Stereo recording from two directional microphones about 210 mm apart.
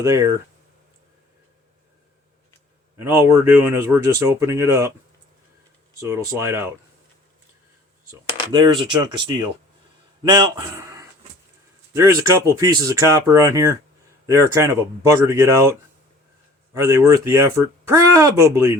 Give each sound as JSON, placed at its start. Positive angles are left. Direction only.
{"t": 0.0, "sound": "speech", "side_deg": -15}
{"t": 3.0, "sound": "speech", "side_deg": -10}
{"t": 6.0, "sound": "speech", "side_deg": -15}
{"t": 8.5, "sound": "speech", "side_deg": -20}
{"t": 11.9, "sound": "speech", "side_deg": -15}
{"t": 16.7, "sound": "speech", "side_deg": -15}